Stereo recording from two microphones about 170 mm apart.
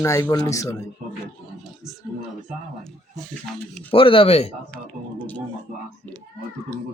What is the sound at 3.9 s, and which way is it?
Speech, 30° left (ahead or behind).